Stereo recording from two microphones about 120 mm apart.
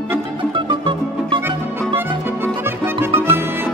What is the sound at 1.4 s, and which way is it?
Music, 20° right (ahead or behind).